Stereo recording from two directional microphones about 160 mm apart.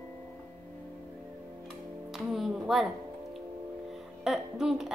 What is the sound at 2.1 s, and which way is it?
Speech, centre (ahead or behind).